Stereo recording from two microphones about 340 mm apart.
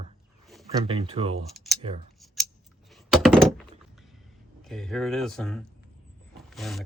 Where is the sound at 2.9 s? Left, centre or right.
Centre.